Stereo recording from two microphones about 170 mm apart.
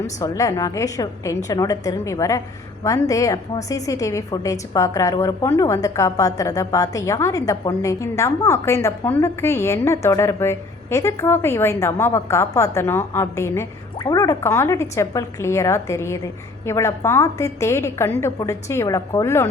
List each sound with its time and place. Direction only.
0.2 s a woman's voice: 20° left (ahead or behind)